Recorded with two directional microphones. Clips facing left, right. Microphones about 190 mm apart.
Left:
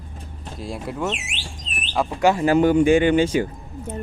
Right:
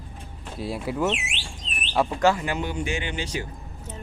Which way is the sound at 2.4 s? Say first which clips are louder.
Left 13 dB; 45° left (ahead or behind).